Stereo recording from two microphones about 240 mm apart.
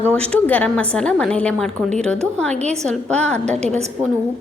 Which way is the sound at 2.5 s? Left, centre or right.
Right.